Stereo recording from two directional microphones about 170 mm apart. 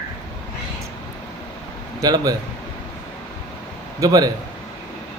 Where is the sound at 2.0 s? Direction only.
20° right (ahead or behind).